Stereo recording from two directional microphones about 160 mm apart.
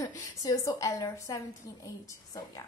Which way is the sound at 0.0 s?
20° left (ahead or behind).